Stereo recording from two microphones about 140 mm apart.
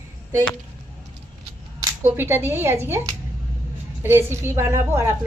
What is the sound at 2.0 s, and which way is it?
Speech, 15° right (ahead or behind).